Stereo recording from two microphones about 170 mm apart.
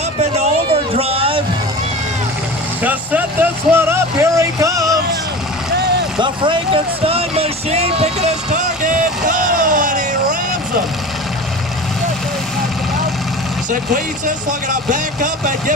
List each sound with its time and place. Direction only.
0.2 s a sound: 35° right (ahead or behind)
2.8 s music: 10° right (ahead or behind)
6.1 s music: 30° right (ahead or behind)
8.8 s vehicle: 50° right (ahead or behind)
14.7 s speech: 50° right (ahead or behind)